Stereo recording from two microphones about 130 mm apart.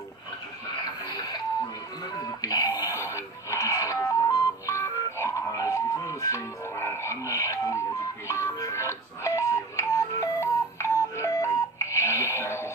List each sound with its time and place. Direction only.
0.8 s radio: 30° left (ahead or behind)
2.1 s music: 30° left (ahead or behind)